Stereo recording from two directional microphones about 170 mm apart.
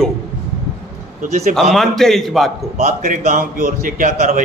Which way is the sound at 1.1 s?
45° right (ahead or behind).